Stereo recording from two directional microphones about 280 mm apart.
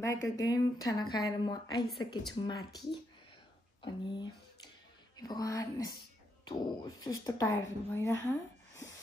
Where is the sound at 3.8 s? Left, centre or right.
Centre.